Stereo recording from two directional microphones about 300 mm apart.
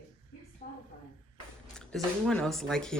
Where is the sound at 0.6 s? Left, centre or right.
Left.